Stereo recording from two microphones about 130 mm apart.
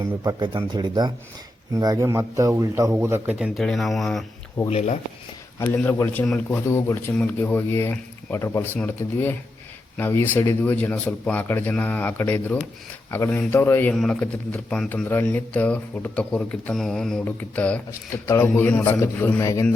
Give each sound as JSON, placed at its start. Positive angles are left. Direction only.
{"t": 0.3, "sound": "a man's voice", "side_deg": -35}
{"t": 3.2, "sound": "speech", "side_deg": -5}
{"t": 4.7, "sound": "speech", "side_deg": 60}
{"t": 5.5, "sound": "speech", "side_deg": 15}
{"t": 6.7, "sound": "speech", "side_deg": 20}
{"t": 13.9, "sound": "speech", "side_deg": 5}
{"t": 15.0, "sound": "speech", "side_deg": 15}